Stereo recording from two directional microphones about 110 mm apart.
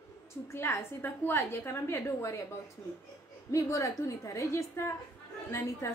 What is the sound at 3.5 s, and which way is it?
A woman's voice, 30° left (ahead or behind).